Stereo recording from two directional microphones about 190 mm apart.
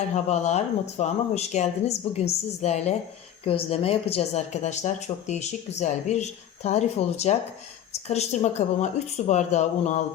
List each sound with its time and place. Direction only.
0.1 s speech: 35° left (ahead or behind)